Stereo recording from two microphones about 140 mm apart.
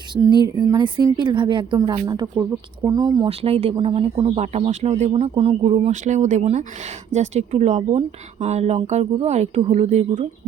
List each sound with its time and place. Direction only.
0.3 s a woman's voice: 30° right (ahead or behind)
3.2 s speech: 45° right (ahead or behind)
5.9 s speech: 60° right (ahead or behind)